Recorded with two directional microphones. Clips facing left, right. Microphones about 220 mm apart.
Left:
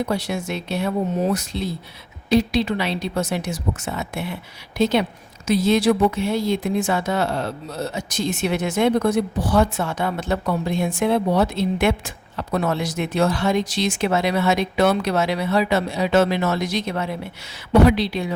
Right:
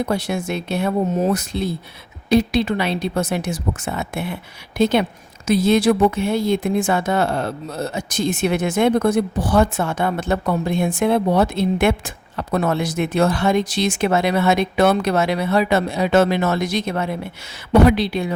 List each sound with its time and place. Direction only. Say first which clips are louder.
0.1 s speech: right 2 dB; 50° right (ahead or behind)